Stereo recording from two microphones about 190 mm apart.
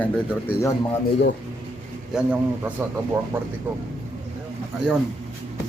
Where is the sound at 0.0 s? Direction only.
10° left (ahead or behind).